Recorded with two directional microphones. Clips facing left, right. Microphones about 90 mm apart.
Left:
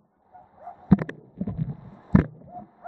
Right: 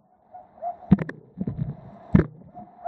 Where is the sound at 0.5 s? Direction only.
10° left (ahead or behind).